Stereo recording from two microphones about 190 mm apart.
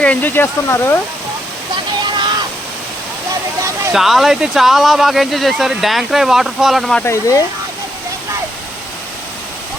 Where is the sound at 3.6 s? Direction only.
15° right (ahead or behind).